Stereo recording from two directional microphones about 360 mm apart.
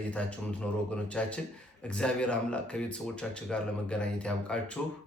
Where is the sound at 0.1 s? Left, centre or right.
Centre.